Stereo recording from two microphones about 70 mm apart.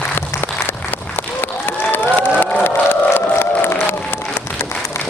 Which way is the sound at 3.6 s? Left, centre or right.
Left.